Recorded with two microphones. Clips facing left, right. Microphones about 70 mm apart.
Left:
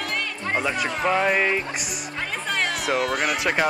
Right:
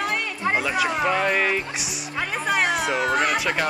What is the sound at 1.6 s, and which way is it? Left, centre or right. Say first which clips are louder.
Music: left 1 dB; centre.